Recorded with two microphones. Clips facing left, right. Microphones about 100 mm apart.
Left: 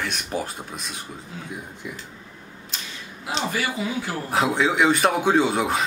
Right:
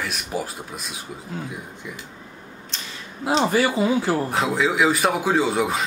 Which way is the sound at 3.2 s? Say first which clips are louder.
Right 7 dB; 35° right (ahead or behind).